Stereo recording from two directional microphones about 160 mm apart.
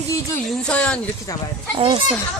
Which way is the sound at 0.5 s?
5° left (ahead or behind).